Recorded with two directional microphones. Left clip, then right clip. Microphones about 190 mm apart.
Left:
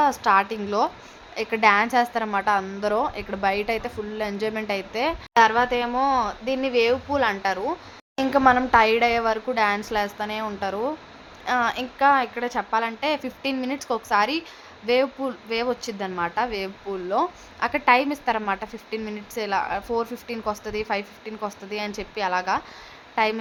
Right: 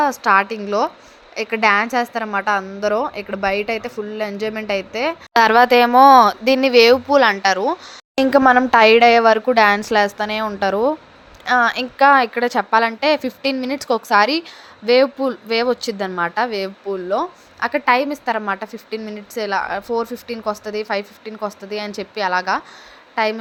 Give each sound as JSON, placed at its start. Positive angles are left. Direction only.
{"t": 0.0, "sound": "speech", "side_deg": -15}
{"t": 5.3, "sound": "a woman's voice", "side_deg": -40}